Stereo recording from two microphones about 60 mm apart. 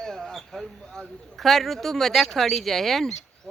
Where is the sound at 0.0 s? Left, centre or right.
Centre.